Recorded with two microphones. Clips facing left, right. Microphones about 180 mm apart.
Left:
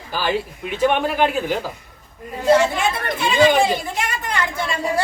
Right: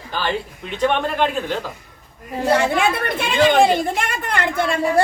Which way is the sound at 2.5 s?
60° right (ahead or behind).